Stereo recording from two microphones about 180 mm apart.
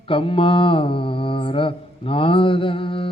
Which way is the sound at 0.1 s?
30° left (ahead or behind).